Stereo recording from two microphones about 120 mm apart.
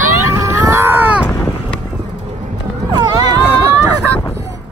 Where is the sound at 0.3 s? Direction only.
25° right (ahead or behind).